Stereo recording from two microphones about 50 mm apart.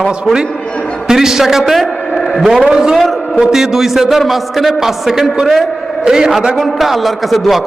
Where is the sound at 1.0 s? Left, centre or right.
Centre.